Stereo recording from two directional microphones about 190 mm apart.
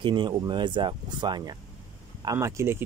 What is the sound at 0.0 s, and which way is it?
Speech, 25° right (ahead or behind).